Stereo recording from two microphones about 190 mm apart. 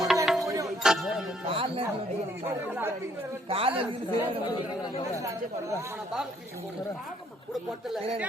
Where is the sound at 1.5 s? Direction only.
30° right (ahead or behind).